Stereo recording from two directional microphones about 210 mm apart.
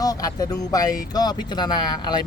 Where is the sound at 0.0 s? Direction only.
15° left (ahead or behind).